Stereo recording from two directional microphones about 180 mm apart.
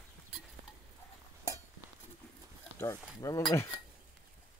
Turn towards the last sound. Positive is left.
turn(degrees=15)  # may be behind; listen again after turning